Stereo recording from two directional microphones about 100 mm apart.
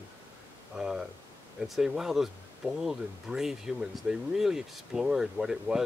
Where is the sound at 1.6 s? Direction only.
5° right (ahead or behind).